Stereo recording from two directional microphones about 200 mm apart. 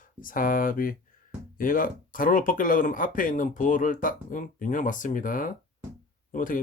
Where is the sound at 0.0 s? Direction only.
45° left (ahead or behind).